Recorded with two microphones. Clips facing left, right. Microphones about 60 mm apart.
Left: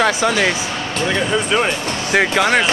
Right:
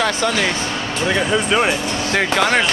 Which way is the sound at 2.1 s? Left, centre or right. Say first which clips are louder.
Left 2 dB; centre.